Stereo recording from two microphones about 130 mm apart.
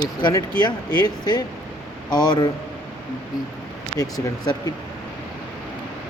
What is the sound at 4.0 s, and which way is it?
Speech, 30° left (ahead or behind).